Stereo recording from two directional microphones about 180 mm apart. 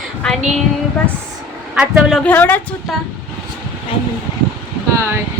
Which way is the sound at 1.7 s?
5° right (ahead or behind).